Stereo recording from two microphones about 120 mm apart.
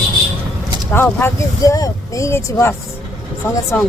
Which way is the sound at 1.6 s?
30° left (ahead or behind).